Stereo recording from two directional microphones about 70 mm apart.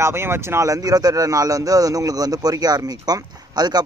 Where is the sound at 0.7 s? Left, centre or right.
Right.